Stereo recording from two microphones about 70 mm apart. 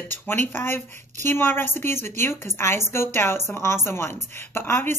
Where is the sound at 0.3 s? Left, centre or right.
Left.